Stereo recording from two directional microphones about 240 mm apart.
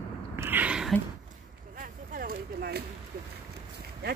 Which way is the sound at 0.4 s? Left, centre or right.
Centre.